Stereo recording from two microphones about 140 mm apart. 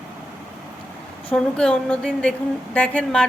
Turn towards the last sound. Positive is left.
turn(degrees=5)  # may be behind; listen again after turning